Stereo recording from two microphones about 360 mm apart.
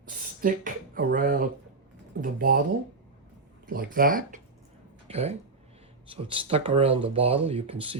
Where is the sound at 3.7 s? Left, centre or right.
Right.